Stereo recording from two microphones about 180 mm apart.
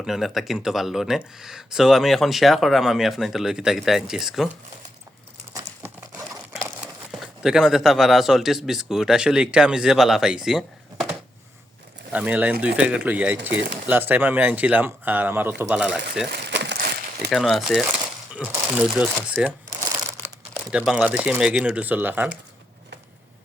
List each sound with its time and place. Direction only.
0.0 s speech: centre (ahead or behind)
6.8 s speech: centre (ahead or behind)
12.1 s speech: 10° right (ahead or behind)
16.5 s crushing: 70° right (ahead or behind)
17.3 s speech: centre (ahead or behind)